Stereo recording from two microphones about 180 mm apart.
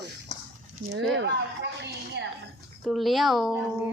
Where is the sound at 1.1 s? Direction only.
85° right.